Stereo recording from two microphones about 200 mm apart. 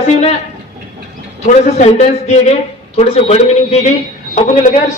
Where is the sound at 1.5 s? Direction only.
35° left (ahead or behind).